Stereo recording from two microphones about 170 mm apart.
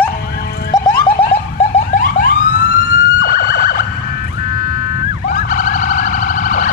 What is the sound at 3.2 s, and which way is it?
Emergency vehicle, 60° left (ahead or behind).